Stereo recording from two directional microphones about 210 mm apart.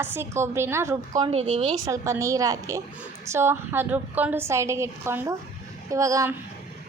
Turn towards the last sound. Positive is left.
turn(degrees=-15)  # may be behind; listen again after turning